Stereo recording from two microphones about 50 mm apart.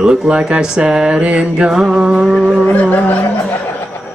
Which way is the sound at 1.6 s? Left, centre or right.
Centre.